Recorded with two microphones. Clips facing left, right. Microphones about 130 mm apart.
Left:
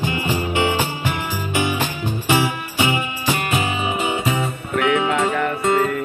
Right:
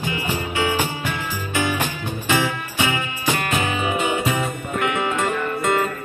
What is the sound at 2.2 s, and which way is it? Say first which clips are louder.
Music: left 2 dB; 15° left (ahead or behind).